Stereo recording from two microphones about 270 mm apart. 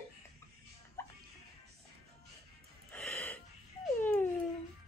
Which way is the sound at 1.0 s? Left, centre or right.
Centre.